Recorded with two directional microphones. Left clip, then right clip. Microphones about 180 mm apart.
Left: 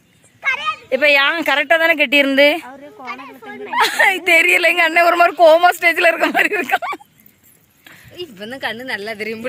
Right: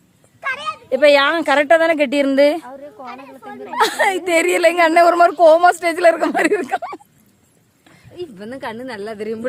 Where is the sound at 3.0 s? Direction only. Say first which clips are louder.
Left 3 dB; 65° right (ahead or behind).